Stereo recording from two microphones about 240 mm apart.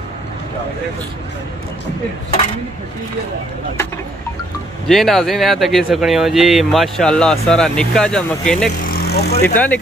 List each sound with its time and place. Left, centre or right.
4.8 s speech: centre
8.8 s vehicle: left